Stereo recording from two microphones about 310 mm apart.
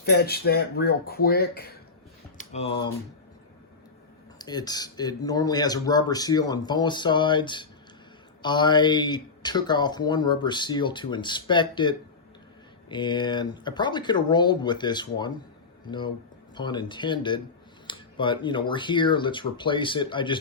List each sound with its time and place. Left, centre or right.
0.0 s speech: left
2.4 s speech: centre
4.4 s speech: centre